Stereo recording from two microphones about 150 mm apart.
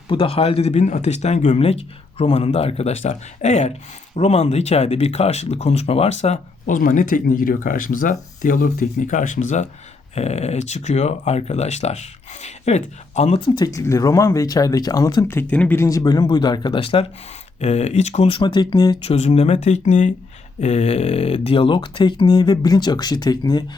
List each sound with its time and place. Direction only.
0.1 s speech: 35° left (ahead or behind); by 9.6 s 55° left (ahead or behind)
10.2 s speech: 45° left (ahead or behind)
13.7 s speech: 20° left (ahead or behind)
19.1 s speech: 45° left (ahead or behind); by 23.6 s 25° left (ahead or behind)